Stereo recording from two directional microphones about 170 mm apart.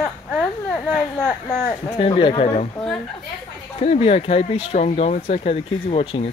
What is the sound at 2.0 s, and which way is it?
Speech, 30° left (ahead or behind).